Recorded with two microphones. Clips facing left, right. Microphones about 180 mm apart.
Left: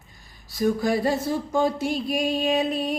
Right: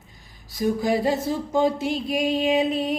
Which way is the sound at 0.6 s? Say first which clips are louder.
Even; 15° right (ahead or behind).